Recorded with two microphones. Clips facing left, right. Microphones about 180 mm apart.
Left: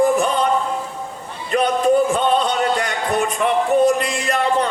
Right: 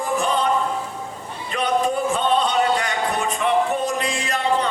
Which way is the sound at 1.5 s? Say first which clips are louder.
Left 7 dB; 45° left (ahead or behind).